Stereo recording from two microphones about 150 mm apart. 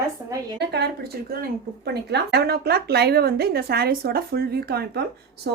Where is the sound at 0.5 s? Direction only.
90° right.